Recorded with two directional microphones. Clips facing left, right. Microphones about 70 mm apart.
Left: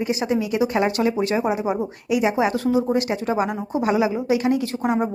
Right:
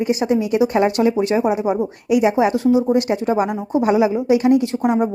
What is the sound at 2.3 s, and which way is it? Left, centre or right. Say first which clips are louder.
Speech: right 4 dB; centre.